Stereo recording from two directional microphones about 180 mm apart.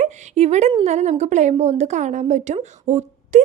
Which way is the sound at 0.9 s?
40° right (ahead or behind).